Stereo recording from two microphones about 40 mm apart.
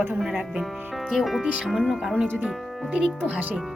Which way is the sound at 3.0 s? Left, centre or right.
Right.